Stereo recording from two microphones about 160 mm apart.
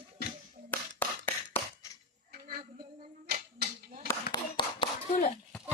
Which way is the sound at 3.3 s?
45° right (ahead or behind).